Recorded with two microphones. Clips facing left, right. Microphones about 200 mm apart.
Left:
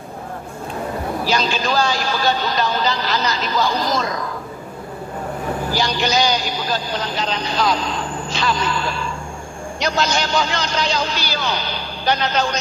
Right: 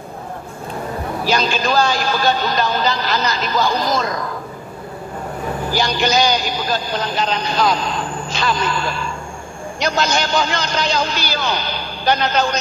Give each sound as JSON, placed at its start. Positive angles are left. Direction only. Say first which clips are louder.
{"t": 1.2, "sound": "a man's voice", "louder": "right 3 dB", "side_deg": -50}
{"t": 5.8, "sound": "a man's voice", "louder": "right 3 dB", "side_deg": -50}